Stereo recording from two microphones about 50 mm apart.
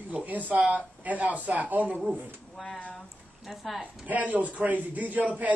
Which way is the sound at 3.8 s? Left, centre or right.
Right.